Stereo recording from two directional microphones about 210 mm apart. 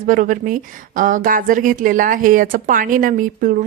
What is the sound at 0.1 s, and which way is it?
Speech, 40° right (ahead or behind).